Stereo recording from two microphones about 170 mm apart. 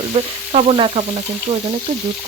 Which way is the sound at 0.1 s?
35° right (ahead or behind).